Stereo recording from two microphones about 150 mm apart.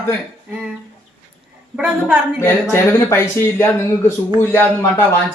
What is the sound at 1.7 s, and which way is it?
Speech, 5° right (ahead or behind).